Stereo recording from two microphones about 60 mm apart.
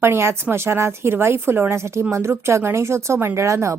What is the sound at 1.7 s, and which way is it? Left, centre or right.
A woman's voice, right.